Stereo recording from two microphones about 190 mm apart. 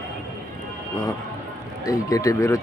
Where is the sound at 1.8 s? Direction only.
20° left (ahead or behind).